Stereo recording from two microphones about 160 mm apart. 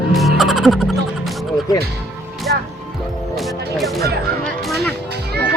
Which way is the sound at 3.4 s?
Centre (ahead or behind).